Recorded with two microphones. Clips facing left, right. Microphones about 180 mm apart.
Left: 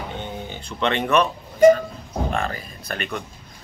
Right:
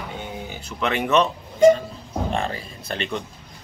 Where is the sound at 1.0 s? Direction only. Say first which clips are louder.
Right 3 dB; 20° right (ahead or behind).